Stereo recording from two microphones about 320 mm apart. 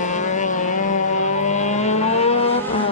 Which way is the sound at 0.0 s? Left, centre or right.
Left.